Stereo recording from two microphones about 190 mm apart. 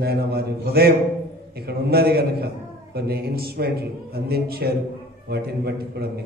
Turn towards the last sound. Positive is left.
turn(degrees=-55)  # may be behind; listen again after turning